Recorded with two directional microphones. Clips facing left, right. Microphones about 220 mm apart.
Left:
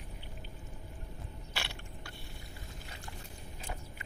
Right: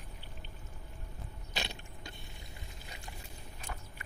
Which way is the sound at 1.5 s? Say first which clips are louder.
Right 3 dB; 20° right (ahead or behind).